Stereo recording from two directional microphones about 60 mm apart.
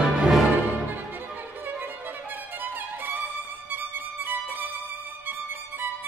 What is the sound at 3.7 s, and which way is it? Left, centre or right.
Violin, right.